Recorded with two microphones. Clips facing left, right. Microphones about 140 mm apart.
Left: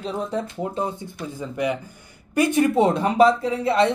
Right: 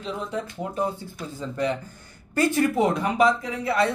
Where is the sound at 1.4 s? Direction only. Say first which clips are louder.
Left 1 dB; 10° left (ahead or behind).